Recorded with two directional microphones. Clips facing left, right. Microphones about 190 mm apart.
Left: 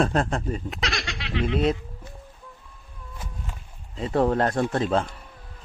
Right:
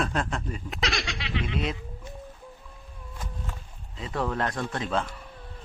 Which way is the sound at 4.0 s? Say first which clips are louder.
Left 7 dB; 35° left (ahead or behind).